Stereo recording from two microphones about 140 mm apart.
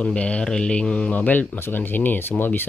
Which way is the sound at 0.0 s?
10° left (ahead or behind).